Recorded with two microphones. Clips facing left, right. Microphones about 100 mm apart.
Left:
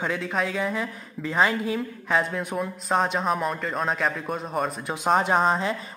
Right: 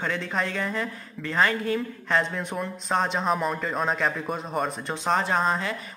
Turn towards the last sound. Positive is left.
turn(degrees=20)  # may be behind; listen again after turning